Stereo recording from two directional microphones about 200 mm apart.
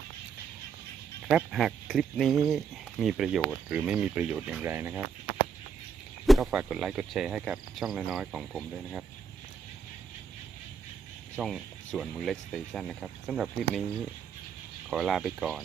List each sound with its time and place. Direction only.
1.3 s cricket: 5° right (ahead or behind)
6.2 s cricket: centre (ahead or behind)
11.3 s cricket: centre (ahead or behind)
14.8 s cricket: centre (ahead or behind)